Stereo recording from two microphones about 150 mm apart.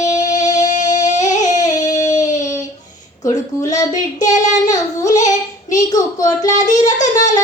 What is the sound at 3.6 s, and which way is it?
Child singing, 25° left (ahead or behind).